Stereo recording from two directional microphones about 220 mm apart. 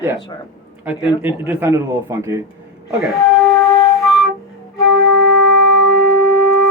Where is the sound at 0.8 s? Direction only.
5° right (ahead or behind).